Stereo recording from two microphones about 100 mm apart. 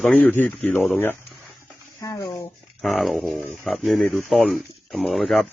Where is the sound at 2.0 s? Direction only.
35° left (ahead or behind).